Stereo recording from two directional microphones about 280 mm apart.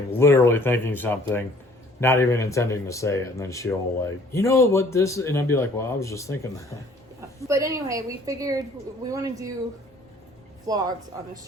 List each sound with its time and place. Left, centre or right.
0.1 s speech: centre
7.4 s a woman's voice: centre
10.7 s a woman's voice: centre